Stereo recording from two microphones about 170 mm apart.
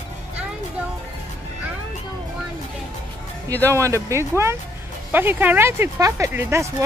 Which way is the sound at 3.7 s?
15° right (ahead or behind).